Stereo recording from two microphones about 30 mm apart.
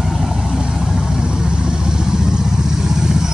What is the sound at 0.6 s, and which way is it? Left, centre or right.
Vehicle, right.